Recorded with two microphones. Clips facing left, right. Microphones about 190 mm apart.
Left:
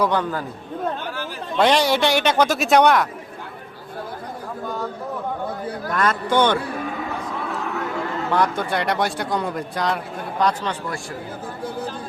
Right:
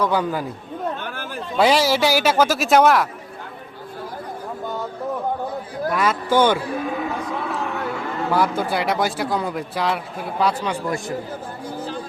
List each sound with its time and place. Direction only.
0.1 s speech: 10° right (ahead or behind)
1.0 s chatter: 50° right (ahead or behind)
1.5 s a man's voice: 5° right (ahead or behind)
5.9 s speech: 5° right (ahead or behind)
8.3 s a man's voice: 5° right (ahead or behind)